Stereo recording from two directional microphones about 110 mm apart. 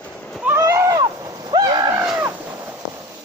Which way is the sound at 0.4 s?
25° right (ahead or behind).